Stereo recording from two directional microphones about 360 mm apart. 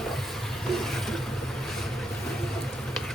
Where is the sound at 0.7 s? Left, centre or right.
Centre.